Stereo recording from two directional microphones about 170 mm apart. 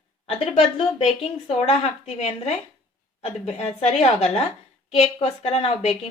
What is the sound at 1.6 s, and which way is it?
A woman's voice, 40° left (ahead or behind).